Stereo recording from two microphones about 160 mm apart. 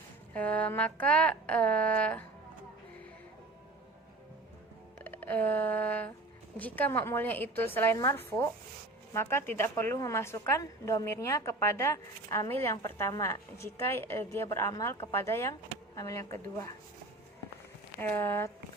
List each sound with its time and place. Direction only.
0.3 s a woman's voice: 10° left (ahead or behind)
5.0 s a sound: 10° left (ahead or behind)
6.6 s a woman's voice: 10° left (ahead or behind)
18.0 s a woman's voice: 15° left (ahead or behind)